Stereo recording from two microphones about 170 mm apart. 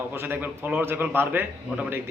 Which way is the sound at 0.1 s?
10° right (ahead or behind).